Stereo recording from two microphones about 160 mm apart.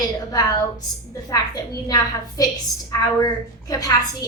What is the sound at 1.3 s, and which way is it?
A woman's voice, 25° left (ahead or behind).